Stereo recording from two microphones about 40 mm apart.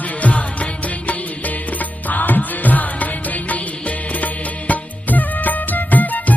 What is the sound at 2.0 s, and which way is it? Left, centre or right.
Music, left.